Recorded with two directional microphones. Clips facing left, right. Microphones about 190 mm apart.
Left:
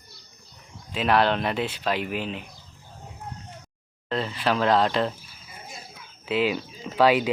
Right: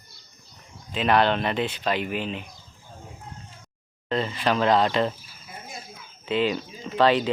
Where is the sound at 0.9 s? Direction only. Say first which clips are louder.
Right 1 dB; centre (ahead or behind).